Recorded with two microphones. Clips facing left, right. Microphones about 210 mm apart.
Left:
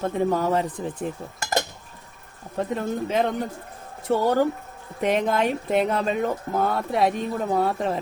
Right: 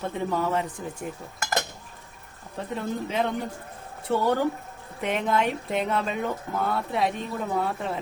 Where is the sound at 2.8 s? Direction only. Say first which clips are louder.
Left 2 dB; 45° left (ahead or behind).